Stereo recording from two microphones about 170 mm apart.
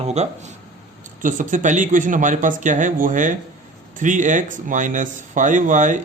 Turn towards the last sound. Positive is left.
turn(degrees=-50)  # may be behind; listen again after turning